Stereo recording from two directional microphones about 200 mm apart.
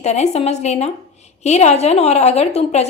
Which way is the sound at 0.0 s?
35° left (ahead or behind).